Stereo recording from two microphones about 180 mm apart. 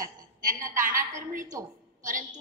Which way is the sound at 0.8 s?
45° right (ahead or behind).